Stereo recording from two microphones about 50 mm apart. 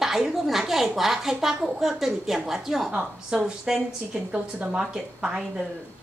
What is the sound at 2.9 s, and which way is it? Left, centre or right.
A woman's voice, centre.